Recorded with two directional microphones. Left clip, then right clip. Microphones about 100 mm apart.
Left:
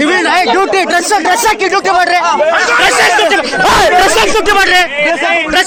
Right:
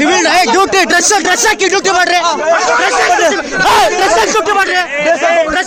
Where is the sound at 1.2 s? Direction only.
55° right (ahead or behind).